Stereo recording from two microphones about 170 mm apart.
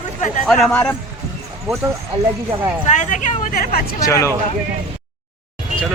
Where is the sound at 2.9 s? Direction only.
45° left (ahead or behind).